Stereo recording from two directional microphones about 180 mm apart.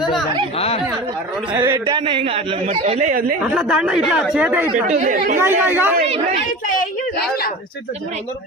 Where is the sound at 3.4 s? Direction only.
5° right (ahead or behind).